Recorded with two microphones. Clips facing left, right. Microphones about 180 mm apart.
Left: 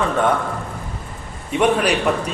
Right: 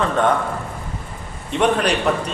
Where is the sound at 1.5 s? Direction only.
5° left (ahead or behind).